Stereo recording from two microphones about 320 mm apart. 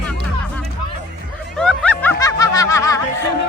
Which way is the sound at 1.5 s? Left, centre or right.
Centre.